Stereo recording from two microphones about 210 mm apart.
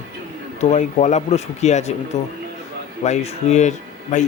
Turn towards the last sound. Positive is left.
turn(degrees=35)  # may be behind; listen again after turning